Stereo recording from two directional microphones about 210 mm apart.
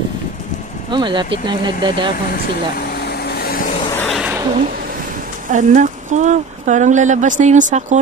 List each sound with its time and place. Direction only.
0.9 s speech: 20° right (ahead or behind)
2.8 s vehicle: 50° left (ahead or behind)
3.9 s a sound: 10° left (ahead or behind)
5.5 s speech: 35° right (ahead or behind)